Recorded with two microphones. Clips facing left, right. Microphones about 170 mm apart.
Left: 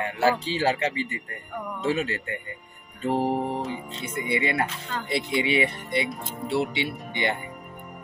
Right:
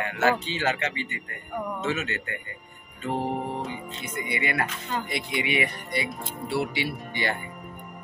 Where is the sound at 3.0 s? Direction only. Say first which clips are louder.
Left 4 dB; 35° left (ahead or behind).